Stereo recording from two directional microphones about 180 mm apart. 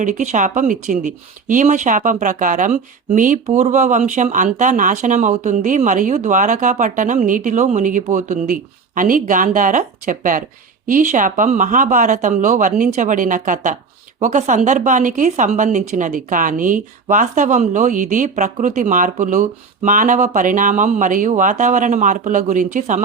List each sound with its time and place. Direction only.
0.0 s speech: 45° right (ahead or behind)